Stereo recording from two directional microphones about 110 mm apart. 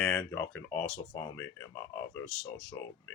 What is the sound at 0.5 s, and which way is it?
Speech, 20° left (ahead or behind).